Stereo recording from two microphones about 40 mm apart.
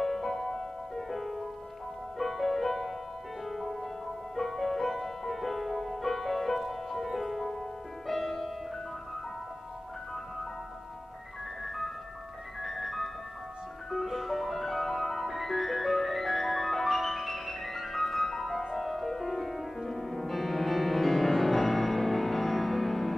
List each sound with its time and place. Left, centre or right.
0.0 s music: centre
11.6 s music: centre